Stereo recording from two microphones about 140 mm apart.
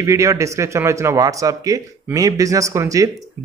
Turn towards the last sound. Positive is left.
turn(degrees=-25)  # may be behind; listen again after turning